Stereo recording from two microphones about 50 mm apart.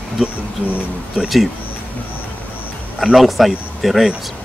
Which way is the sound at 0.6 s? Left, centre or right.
Right.